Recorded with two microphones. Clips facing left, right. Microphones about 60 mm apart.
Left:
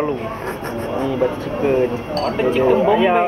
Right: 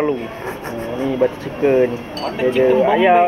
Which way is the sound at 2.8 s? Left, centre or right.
Centre.